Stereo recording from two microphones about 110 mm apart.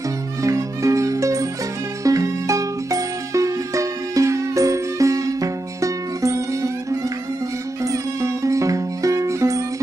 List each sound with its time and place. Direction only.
0.4 s music: 30° right (ahead or behind)
7.8 s music: 30° right (ahead or behind)